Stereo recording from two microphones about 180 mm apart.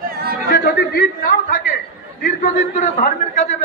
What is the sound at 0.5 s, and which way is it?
A man's voice, 55° left (ahead or behind).